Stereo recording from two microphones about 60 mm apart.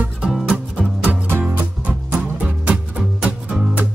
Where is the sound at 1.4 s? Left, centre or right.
Right.